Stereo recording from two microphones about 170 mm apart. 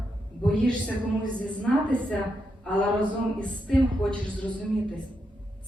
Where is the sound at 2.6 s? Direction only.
5° left (ahead or behind).